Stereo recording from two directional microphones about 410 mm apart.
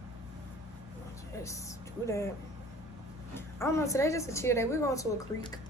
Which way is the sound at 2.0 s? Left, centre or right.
Centre.